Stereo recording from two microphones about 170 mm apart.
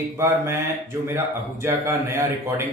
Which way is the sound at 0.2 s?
15° right (ahead or behind).